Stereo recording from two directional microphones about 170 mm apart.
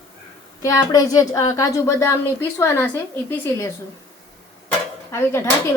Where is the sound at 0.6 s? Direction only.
20° left (ahead or behind).